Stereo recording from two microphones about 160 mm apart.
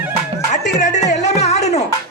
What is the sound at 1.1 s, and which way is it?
Music, 45° left (ahead or behind).